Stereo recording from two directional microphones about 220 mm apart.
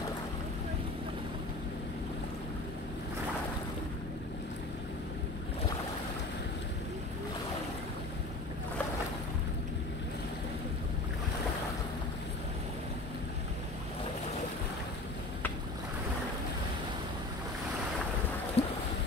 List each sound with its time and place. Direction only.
18.6 s boat: 25° left (ahead or behind)